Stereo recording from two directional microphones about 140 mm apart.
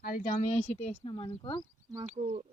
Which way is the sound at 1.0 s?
35° left (ahead or behind).